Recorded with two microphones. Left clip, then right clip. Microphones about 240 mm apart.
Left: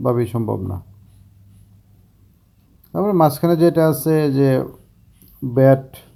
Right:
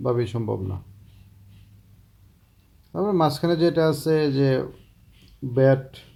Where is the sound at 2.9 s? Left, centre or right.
Centre.